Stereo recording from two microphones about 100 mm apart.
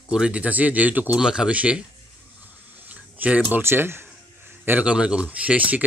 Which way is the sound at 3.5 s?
20° right (ahead or behind).